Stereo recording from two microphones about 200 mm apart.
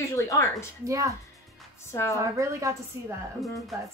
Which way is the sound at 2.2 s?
15° right (ahead or behind).